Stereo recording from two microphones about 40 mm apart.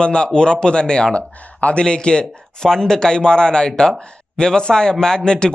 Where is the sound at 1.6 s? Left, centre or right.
Left.